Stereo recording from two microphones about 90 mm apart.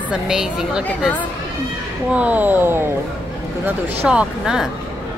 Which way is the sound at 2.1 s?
15° right (ahead or behind).